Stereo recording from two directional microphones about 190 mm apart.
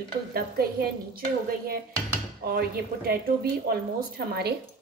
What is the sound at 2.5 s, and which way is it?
A woman's voice, 55° right (ahead or behind).